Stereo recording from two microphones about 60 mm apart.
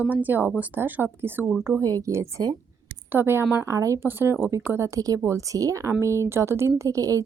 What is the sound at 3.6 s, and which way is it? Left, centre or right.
Speech, right.